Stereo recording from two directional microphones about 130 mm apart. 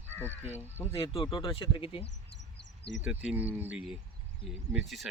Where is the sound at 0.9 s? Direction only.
45° left (ahead or behind).